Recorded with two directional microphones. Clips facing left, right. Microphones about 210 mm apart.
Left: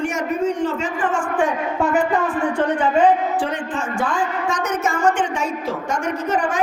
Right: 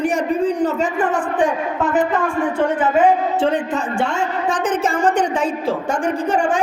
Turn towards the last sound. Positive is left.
turn(degrees=-30)  # may be behind; listen again after turning